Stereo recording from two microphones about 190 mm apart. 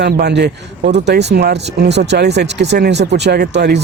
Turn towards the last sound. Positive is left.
turn(degrees=-60)  # may be behind; listen again after turning